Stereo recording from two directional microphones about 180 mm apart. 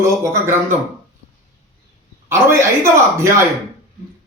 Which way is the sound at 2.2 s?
15° right (ahead or behind).